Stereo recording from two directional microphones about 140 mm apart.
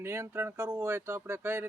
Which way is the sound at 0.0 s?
15° right (ahead or behind).